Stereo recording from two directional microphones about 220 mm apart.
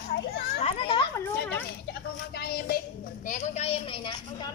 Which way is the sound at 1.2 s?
10° left (ahead or behind).